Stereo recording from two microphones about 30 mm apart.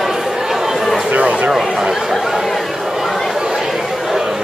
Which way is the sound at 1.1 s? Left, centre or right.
Right.